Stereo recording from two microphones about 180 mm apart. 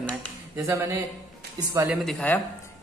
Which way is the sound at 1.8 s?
Centre (ahead or behind).